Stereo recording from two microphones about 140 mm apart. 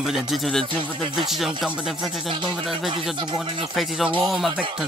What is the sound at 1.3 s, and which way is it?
Speech, centre (ahead or behind).